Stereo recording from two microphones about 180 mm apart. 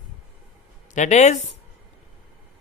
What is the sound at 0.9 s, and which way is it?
Speech, 40° left (ahead or behind).